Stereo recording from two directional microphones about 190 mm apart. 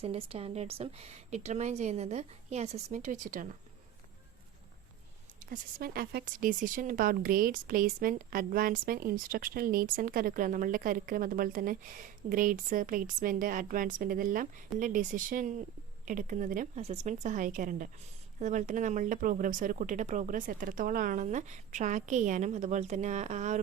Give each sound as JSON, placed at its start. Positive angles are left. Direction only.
{"t": 0.0, "sound": "speech", "side_deg": -30}
{"t": 5.4, "sound": "speech", "side_deg": -50}